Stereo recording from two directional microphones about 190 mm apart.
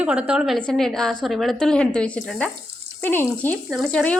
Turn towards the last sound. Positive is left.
turn(degrees=5)  # may be behind; listen again after turning